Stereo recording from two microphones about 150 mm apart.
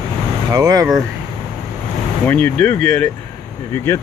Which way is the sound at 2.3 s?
10° left (ahead or behind).